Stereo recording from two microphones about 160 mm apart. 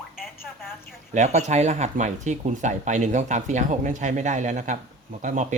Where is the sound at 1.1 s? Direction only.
45° right (ahead or behind).